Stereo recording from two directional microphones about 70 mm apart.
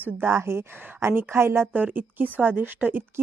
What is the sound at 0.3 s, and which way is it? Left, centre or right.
A woman's voice, right.